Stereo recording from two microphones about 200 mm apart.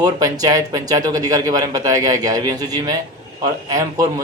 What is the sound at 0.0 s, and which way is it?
A man's voice, 20° right (ahead or behind).